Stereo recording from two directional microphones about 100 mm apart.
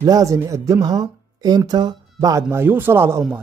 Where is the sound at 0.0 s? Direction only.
35° right (ahead or behind).